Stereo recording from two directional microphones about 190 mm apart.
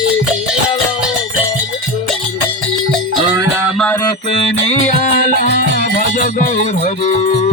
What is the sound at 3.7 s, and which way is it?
Music, 5° left (ahead or behind).